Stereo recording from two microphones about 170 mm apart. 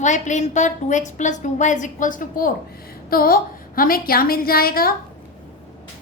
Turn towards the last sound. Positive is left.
turn(degrees=60)  # may be behind; listen again after turning